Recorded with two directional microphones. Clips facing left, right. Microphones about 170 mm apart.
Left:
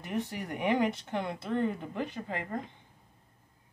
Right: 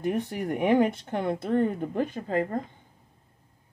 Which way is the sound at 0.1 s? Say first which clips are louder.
Right 6 dB; 45° right (ahead or behind).